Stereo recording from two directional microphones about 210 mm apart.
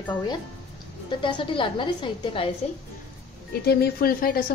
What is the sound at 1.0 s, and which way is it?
A woman's voice, 25° left (ahead or behind).